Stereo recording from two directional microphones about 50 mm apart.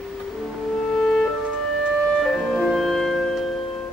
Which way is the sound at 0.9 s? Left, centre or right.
Centre.